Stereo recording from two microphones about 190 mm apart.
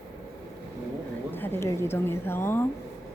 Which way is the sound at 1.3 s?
10° left (ahead or behind).